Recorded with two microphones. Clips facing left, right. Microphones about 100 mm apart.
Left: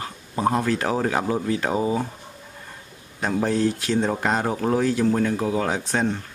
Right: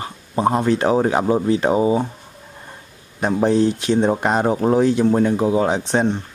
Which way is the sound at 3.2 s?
20° right (ahead or behind).